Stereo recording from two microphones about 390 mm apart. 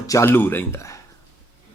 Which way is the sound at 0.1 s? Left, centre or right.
Centre.